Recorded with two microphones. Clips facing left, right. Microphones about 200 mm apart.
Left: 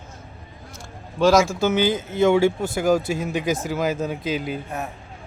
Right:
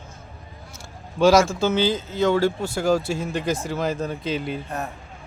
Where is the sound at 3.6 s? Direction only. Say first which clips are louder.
Left 2 dB; 5° left (ahead or behind).